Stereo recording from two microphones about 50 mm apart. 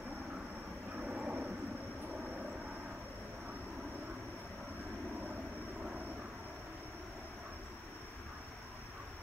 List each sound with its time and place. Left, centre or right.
1.0 s vehicle: right